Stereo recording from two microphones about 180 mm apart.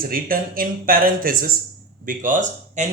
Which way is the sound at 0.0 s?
55° right (ahead or behind).